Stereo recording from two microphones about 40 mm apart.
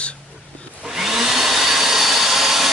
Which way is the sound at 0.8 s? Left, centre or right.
Centre.